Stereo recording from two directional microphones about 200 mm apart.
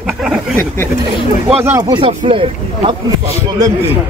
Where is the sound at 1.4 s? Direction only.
10° right (ahead or behind).